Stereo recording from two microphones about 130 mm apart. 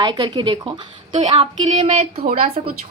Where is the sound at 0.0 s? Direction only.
35° right (ahead or behind).